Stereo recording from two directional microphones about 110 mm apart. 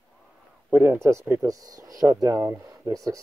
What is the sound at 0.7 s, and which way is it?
Speech, 20° right (ahead or behind).